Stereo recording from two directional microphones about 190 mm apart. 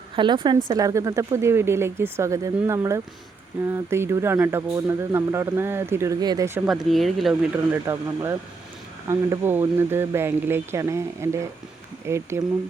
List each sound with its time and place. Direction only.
0.2 s speech: 25° right (ahead or behind)
6.7 s speech: centre (ahead or behind)